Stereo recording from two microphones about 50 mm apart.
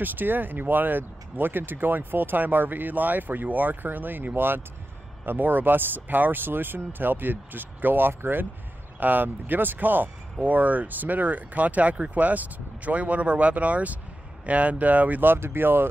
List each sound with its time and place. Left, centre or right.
0.0 s speech: right
9.0 s speech: right
15.3 s speech: right